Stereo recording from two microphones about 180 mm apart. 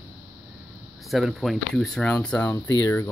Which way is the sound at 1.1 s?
Centre (ahead or behind).